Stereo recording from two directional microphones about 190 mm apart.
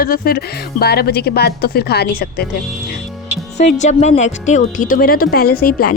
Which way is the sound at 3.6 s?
40° left (ahead or behind).